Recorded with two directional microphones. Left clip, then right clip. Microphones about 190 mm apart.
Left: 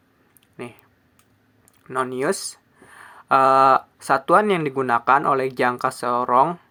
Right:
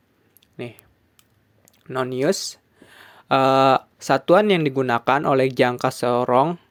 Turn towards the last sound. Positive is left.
turn(degrees=-40)  # may be behind; listen again after turning